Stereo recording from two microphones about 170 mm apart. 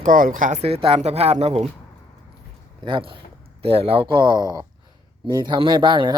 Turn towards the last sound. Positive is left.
turn(degrees=-25)  # may be behind; listen again after turning